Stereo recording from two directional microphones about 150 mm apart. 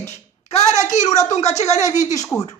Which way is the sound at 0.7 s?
50° left (ahead or behind).